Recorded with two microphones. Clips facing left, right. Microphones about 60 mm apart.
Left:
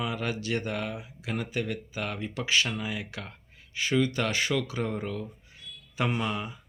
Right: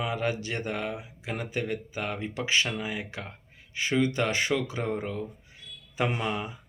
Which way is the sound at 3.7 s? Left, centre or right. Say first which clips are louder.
Even; right.